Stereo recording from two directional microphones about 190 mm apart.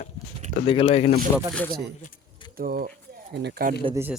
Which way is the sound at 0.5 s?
30° left (ahead or behind).